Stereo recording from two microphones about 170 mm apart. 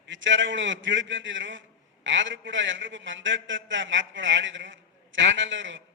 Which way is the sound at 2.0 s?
90° right.